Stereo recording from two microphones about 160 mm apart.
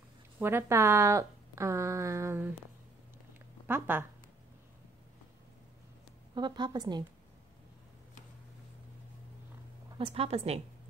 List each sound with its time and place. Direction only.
0.4 s a woman's voice: 15° right (ahead or behind)
3.6 s speech: 15° right (ahead or behind)
6.3 s a woman's voice: 25° right (ahead or behind)
9.9 s a woman's voice: 35° right (ahead or behind)